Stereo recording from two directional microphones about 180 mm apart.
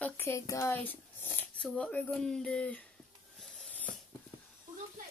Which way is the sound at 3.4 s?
Centre (ahead or behind).